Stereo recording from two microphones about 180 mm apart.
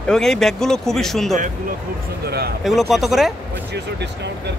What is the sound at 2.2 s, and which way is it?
Speech, 65° right (ahead or behind).